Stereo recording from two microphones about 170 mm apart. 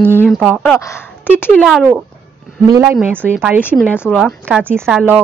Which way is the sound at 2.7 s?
20° right (ahead or behind).